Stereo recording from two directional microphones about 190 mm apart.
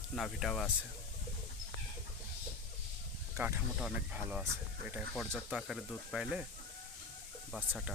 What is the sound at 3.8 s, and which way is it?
Speech, 5° right (ahead or behind).